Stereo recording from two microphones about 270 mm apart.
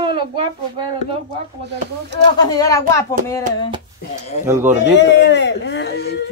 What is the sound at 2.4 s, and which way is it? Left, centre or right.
Speech, centre.